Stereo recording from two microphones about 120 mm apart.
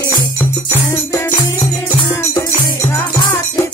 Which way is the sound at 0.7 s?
20° left (ahead or behind).